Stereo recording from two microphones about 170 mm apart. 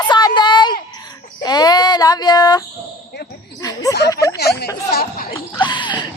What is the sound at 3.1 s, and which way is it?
Basketball bounce, 85° left.